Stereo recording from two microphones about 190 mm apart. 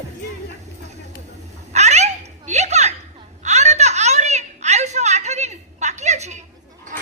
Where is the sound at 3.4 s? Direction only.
35° right (ahead or behind).